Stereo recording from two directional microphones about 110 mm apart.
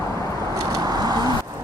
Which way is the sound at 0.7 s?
35° right (ahead or behind).